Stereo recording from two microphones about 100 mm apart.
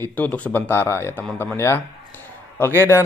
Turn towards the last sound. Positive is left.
turn(degrees=25)  # may be behind; listen again after turning